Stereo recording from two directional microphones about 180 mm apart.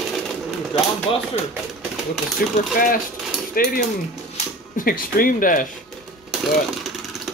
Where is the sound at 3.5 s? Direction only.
55° left (ahead or behind).